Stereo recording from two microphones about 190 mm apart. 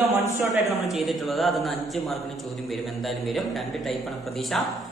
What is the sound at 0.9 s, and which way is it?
Speech, centre (ahead or behind).